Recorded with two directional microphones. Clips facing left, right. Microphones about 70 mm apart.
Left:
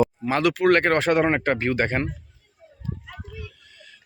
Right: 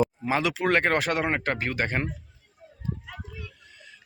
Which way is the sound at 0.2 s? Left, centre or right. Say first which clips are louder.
Left 5 dB; centre.